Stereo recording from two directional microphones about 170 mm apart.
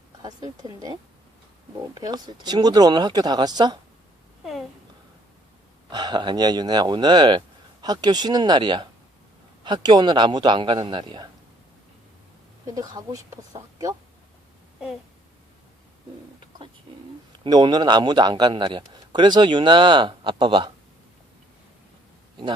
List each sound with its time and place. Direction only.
0.2 s a man's voice: 25° right (ahead or behind)
2.0 s a man's voice: 25° right (ahead or behind)
5.9 s a man's voice: 25° right (ahead or behind)
12.6 s a man's voice: 20° right (ahead or behind)
17.4 s a man's voice: 25° right (ahead or behind)